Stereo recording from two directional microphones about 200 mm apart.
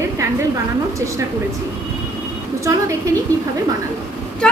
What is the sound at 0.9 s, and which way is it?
Speech, 15° right (ahead or behind).